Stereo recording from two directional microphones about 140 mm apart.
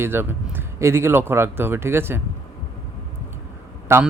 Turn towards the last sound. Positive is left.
turn(degrees=-20)  # may be behind; listen again after turning